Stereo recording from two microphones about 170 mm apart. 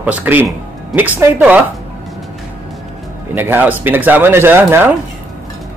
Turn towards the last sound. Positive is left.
turn(degrees=-10)  # may be behind; listen again after turning